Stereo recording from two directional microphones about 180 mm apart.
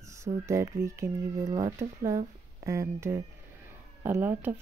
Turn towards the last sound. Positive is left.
turn(degrees=-10)  # may be behind; listen again after turning